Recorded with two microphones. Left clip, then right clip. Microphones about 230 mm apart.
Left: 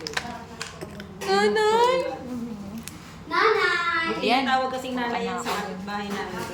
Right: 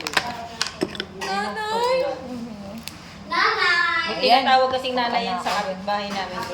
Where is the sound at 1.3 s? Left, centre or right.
Left.